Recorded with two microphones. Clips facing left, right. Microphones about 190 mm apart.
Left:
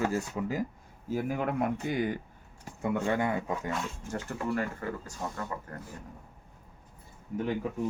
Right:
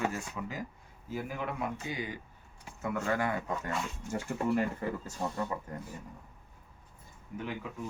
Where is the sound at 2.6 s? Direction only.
30° left (ahead or behind).